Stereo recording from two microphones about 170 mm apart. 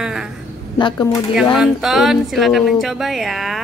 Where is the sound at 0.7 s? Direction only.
25° left (ahead or behind).